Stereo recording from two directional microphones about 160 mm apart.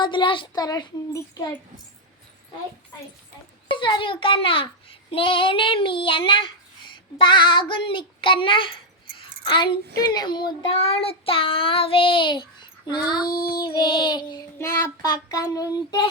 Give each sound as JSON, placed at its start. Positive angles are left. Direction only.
{"t": 0.0, "sound": "child singing", "side_deg": 30}
{"t": 3.7, "sound": "a child's voice", "side_deg": 30}
{"t": 13.2, "sound": "child singing", "side_deg": 65}
{"t": 13.5, "sound": "child singing", "side_deg": 25}